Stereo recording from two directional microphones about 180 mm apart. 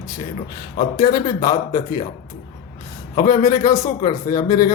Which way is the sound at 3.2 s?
20° left (ahead or behind).